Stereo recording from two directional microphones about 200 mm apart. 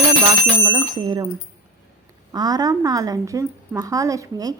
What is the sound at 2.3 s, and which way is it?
A woman's voice, 20° right (ahead or behind).